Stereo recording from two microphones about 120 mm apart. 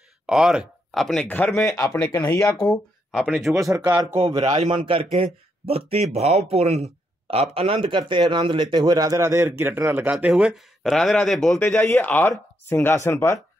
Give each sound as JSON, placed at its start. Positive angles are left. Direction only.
{"t": 0.3, "sound": "speech", "side_deg": -5}
{"t": 1.2, "sound": "speech", "side_deg": 15}
{"t": 1.6, "sound": "speech", "side_deg": 30}
{"t": 2.4, "sound": "speech", "side_deg": 5}
{"t": 3.6, "sound": "speech", "side_deg": -30}
{"t": 4.4, "sound": "a man's voice", "side_deg": -75}
{"t": 4.6, "sound": "speech", "side_deg": -45}
{"t": 10.1, "sound": "speech", "side_deg": -5}
{"t": 11.6, "sound": "speech", "side_deg": 20}